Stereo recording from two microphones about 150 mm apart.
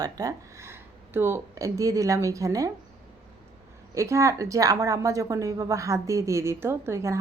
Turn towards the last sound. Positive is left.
turn(degrees=-20)  # may be behind; listen again after turning